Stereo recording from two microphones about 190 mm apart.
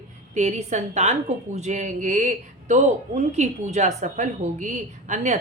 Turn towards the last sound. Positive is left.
turn(degrees=-40)  # may be behind; listen again after turning